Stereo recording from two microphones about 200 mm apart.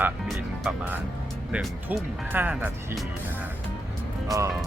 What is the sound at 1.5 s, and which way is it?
Speech, 5° right (ahead or behind).